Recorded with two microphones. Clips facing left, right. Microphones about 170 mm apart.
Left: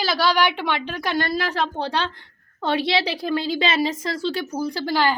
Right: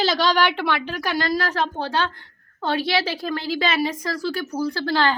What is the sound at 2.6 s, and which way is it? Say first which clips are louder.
A woman's voice: left 1 dB; 20° left (ahead or behind).